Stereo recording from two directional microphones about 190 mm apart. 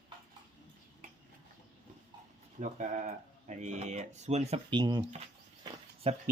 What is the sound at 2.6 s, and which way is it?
Speech, 40° right (ahead or behind).